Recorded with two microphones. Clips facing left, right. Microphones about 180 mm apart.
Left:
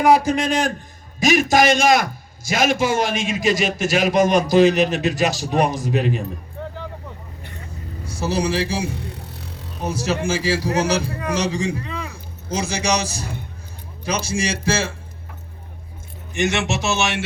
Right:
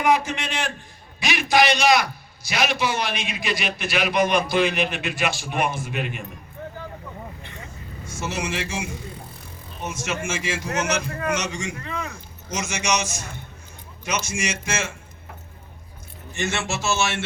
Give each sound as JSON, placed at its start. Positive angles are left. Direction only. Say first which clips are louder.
{"t": 0.3, "sound": "a man's voice", "louder": "left 9 dB", "side_deg": 35}
{"t": 8.0, "sound": "speech", "louder": "left 7 dB", "side_deg": 35}
{"t": 8.9, "sound": "a sound", "louder": "left 4 dB", "side_deg": 70}
{"t": 9.8, "sound": "speech", "louder": "left 6 dB", "side_deg": 35}
{"t": 16.3, "sound": "speech", "louder": "left 6 dB", "side_deg": 15}